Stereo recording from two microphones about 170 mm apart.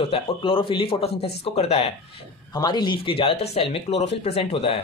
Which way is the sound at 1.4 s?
35° left (ahead or behind).